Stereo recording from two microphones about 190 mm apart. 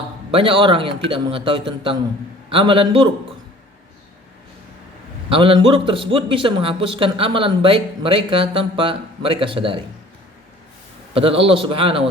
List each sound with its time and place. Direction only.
0.3 s a man's voice: 30° right (ahead or behind)
5.3 s a man's voice: 30° right (ahead or behind)
11.1 s a man's voice: 30° right (ahead or behind)